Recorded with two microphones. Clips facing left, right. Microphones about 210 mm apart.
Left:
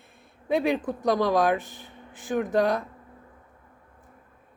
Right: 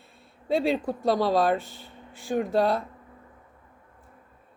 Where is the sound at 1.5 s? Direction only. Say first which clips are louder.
Even; 15° left (ahead or behind).